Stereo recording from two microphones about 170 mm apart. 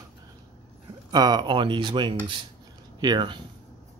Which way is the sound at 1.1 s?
25° right (ahead or behind).